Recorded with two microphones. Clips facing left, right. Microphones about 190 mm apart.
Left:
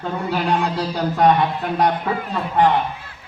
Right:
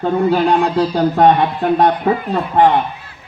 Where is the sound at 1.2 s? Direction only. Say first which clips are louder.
Right 3 dB; 30° right (ahead or behind).